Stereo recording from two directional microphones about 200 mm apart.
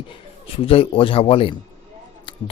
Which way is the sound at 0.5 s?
30° left (ahead or behind).